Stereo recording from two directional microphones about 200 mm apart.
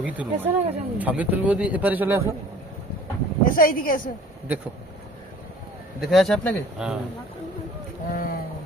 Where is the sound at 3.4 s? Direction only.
45° left (ahead or behind).